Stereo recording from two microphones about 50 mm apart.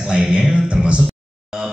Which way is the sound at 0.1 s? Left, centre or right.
Centre.